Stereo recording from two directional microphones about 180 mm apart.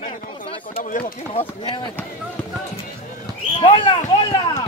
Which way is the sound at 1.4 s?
15° left (ahead or behind).